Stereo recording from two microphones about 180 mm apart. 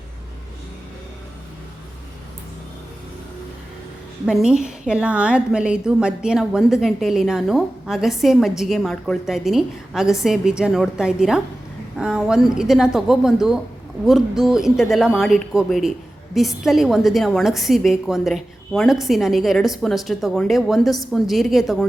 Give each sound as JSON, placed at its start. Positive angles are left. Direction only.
{"t": 4.3, "sound": "a woman's voice", "side_deg": -5}